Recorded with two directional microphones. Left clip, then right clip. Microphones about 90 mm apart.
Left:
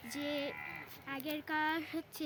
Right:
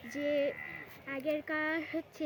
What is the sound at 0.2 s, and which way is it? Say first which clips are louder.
Speech: right 7 dB; 80° left.